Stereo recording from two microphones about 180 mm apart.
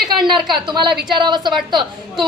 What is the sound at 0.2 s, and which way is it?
Speech, centre (ahead or behind).